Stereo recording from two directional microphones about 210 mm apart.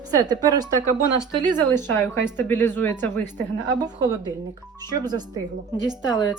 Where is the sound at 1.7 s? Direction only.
10° left (ahead or behind).